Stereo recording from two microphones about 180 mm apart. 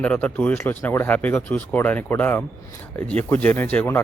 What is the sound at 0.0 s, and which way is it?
Speech, 10° left (ahead or behind).